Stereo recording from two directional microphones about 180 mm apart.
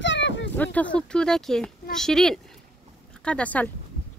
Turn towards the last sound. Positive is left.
turn(degrees=5)  # may be behind; listen again after turning